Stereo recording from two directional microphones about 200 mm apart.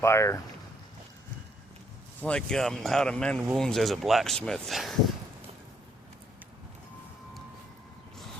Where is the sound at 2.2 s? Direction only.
5° left (ahead or behind).